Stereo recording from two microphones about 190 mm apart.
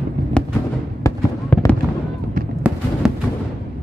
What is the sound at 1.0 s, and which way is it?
Fireworks, 10° left (ahead or behind).